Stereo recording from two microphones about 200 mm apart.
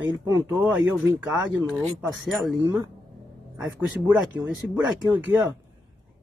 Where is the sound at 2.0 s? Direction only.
Centre (ahead or behind).